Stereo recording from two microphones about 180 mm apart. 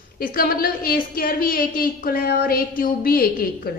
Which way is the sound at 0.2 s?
55° left (ahead or behind).